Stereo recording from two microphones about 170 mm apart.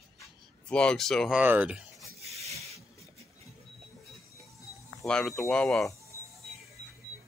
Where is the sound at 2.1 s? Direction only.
40° right (ahead or behind).